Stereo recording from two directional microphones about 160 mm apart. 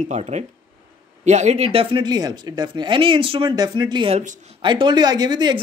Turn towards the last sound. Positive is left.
turn(degrees=-30)  # may be behind; listen again after turning